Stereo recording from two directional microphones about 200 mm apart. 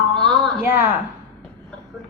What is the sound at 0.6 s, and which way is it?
Speech, 10° right (ahead or behind).